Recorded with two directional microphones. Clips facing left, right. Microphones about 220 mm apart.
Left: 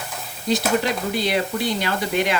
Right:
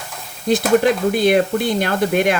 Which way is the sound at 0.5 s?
50° right (ahead or behind).